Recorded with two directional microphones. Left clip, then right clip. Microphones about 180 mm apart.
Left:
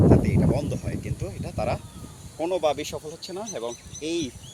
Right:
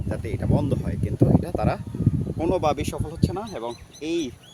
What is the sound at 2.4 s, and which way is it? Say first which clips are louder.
Speech: right 1 dB; 60° right (ahead or behind).